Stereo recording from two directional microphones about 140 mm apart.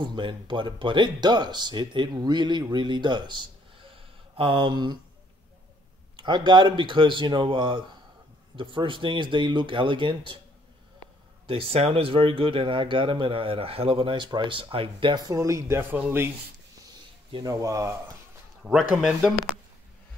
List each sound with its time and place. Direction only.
0.0 s speech: 35° right (ahead or behind)
3.9 s a sound: 40° right (ahead or behind)
6.1 s speech: 35° right (ahead or behind)
11.4 s speech: 40° right (ahead or behind); by 16.3 s 15° right (ahead or behind)
17.3 s speech: 25° right (ahead or behind)
18.6 s speech: 5° right (ahead or behind)